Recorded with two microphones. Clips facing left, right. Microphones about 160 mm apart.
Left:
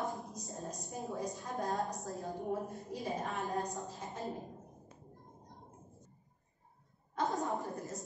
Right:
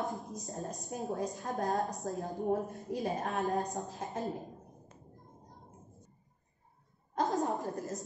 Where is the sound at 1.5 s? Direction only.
20° right (ahead or behind).